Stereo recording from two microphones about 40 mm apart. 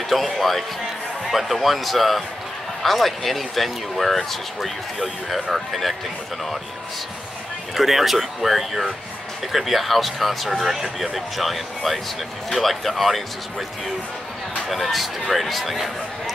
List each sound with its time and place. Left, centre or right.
0.1 s speech: centre
7.7 s speech: centre
14.7 s speech: centre